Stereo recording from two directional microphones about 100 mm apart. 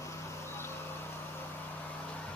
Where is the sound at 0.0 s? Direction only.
30° left (ahead or behind).